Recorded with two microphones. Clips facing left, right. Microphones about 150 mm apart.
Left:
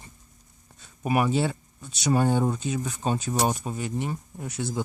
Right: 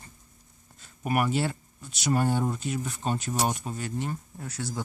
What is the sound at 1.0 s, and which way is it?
Speech, 20° left (ahead or behind).